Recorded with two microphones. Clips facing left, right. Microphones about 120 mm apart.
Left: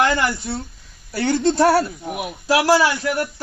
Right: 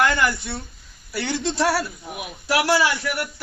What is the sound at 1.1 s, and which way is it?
A man's voice, 45° left (ahead or behind).